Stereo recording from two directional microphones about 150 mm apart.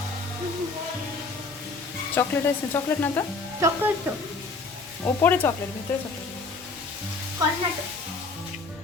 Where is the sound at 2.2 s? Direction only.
15° left (ahead or behind).